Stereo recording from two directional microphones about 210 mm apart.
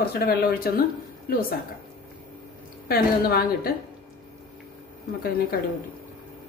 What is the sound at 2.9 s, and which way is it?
Speech, 45° left (ahead or behind).